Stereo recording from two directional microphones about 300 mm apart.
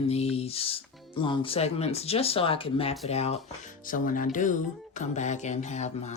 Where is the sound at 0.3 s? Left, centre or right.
Centre.